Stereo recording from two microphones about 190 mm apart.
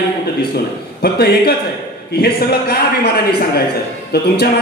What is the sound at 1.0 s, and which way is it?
A man's voice, 55° left (ahead or behind).